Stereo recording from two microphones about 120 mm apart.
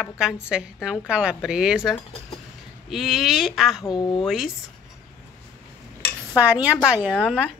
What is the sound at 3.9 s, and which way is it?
Speech, 40° left (ahead or behind).